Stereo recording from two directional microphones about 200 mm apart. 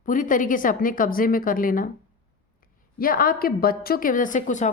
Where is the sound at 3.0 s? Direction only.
45° left (ahead or behind).